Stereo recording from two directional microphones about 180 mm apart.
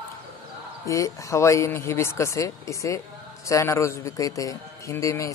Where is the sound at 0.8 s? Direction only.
15° left (ahead or behind).